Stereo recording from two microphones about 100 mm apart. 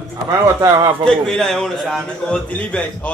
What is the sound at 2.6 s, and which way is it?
Speech, 15° left (ahead or behind).